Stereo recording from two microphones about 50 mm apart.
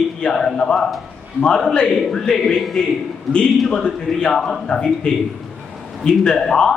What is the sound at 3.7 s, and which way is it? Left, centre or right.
A man's voice, centre.